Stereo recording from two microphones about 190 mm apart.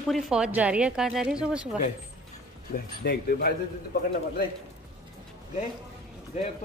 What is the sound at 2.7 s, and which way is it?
Speech, 50° left (ahead or behind).